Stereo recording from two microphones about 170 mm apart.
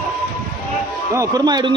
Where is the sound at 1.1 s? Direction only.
20° right (ahead or behind).